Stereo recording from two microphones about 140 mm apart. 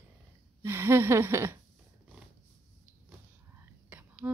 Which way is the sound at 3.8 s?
10° right (ahead or behind).